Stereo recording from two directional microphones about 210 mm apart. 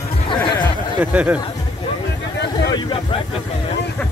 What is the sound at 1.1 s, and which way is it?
Speech, 5° right (ahead or behind).